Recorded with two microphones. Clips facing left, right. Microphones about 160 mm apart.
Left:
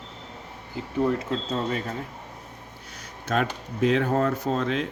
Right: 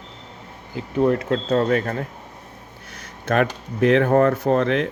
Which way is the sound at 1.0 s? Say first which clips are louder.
Right 7 dB; 65° right (ahead or behind).